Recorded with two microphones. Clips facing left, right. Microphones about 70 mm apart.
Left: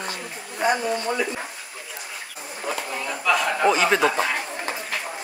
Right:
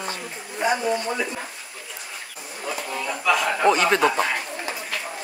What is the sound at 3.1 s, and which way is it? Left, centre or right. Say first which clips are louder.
Chuckle: even; centre.